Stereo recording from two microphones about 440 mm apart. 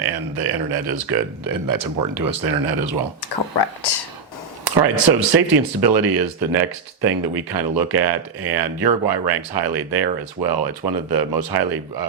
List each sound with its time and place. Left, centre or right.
0.0 s speech: right
3.5 s speech: left
4.6 s speech: right